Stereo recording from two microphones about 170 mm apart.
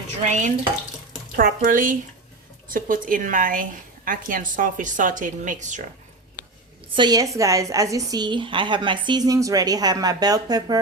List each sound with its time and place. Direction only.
0.2 s a woman's voice: 45° right (ahead or behind)
6.9 s a woman's voice: 25° right (ahead or behind)